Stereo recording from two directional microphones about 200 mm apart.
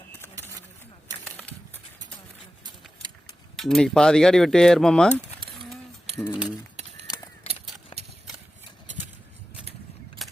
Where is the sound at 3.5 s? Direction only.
Centre (ahead or behind).